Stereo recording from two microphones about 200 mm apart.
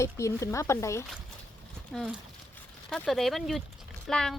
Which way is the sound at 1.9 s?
Centre (ahead or behind).